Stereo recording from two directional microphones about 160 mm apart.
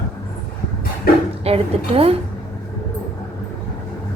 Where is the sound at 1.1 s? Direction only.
70° left (ahead or behind).